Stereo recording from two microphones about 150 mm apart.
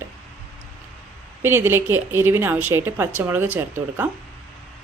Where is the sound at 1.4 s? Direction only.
15° right (ahead or behind).